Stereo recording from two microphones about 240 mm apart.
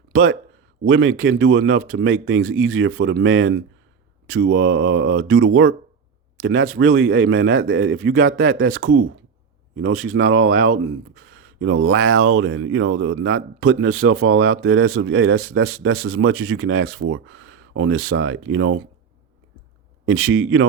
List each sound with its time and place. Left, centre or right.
0.1 s speech: right
20.1 s speech: right